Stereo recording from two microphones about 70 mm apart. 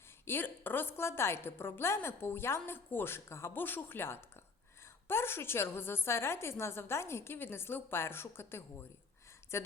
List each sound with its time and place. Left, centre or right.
0.3 s a woman's voice: left